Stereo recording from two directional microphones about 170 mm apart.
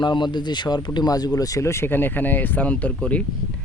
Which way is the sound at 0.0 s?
25° left (ahead or behind).